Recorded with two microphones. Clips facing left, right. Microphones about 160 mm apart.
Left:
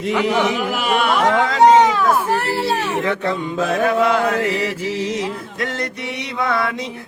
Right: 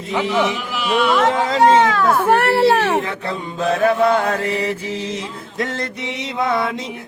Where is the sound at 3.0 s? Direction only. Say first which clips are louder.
Left 4 dB; 30° right (ahead or behind).